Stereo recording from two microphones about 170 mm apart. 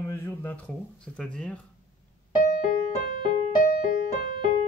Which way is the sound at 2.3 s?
50° left (ahead or behind).